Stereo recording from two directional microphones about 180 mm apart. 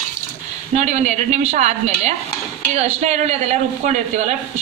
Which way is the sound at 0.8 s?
40° right (ahead or behind).